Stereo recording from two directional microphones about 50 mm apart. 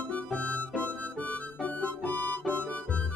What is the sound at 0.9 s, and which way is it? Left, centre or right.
Harmonica, left.